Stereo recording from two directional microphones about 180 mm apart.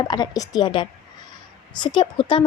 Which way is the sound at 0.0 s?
25° left (ahead or behind).